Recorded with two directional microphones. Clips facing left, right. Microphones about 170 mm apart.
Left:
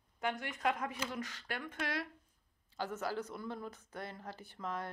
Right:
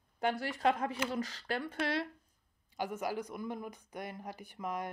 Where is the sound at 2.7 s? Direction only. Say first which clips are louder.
Right 2 dB; 15° right (ahead or behind).